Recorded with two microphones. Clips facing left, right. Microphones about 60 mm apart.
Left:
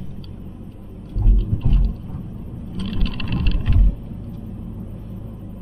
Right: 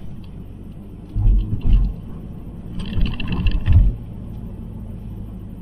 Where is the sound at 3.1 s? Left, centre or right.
Centre.